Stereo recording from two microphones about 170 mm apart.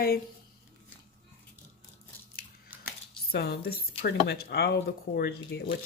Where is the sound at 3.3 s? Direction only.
65° left (ahead or behind).